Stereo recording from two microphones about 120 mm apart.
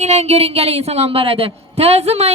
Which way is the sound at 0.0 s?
70° right (ahead or behind).